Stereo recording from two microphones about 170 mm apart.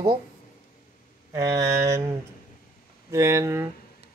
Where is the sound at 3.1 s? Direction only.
20° right (ahead or behind).